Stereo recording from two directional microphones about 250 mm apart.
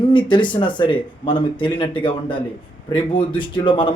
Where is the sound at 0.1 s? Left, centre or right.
Centre.